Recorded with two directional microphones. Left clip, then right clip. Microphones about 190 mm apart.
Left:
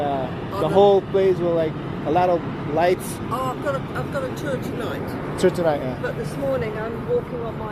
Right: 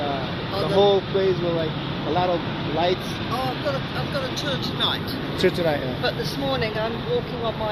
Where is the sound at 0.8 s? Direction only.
45° left (ahead or behind).